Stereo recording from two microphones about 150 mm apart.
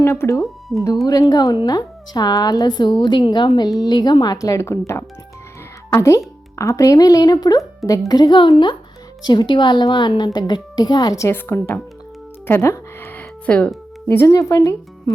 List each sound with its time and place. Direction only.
0.0 s speech: 20° left (ahead or behind)
0.4 s speech: centre (ahead or behind)
1.0 s a woman's voice: 20° left (ahead or behind)
12.5 s music: 15° left (ahead or behind)